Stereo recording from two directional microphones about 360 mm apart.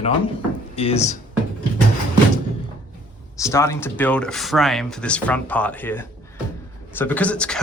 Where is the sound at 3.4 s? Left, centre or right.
Centre.